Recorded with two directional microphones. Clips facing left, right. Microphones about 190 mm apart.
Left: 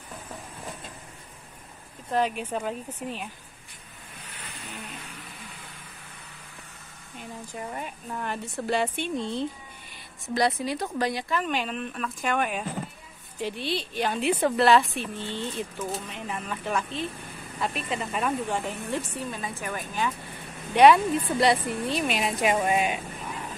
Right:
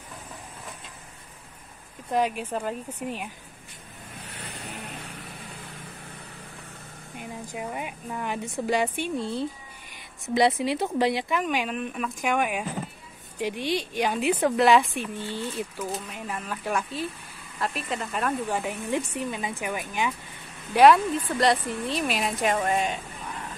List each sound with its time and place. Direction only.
2.0 s speech: 10° right (ahead or behind)
4.4 s vehicle: 35° right (ahead or behind)
7.2 s speech: 10° right (ahead or behind)
10.2 s speech: 25° right (ahead or behind)
11.4 s speech: 10° right (ahead or behind)
18.6 s speech: 15° right (ahead or behind)
20.7 s speech: centre (ahead or behind)